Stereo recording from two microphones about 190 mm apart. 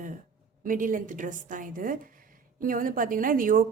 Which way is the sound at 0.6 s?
45° right (ahead or behind).